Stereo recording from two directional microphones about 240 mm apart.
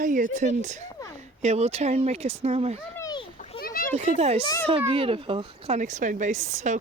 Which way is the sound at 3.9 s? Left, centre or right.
Right.